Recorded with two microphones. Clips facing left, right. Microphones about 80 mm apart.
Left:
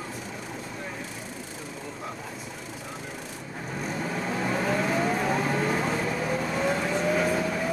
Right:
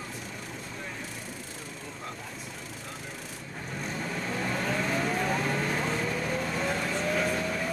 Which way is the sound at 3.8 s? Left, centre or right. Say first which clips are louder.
Left 4 dB; centre.